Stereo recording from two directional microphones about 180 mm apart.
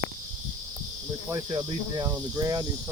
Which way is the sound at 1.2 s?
20° right (ahead or behind).